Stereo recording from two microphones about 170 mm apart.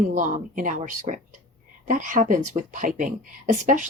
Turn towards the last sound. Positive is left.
turn(degrees=-50)  # may be behind; listen again after turning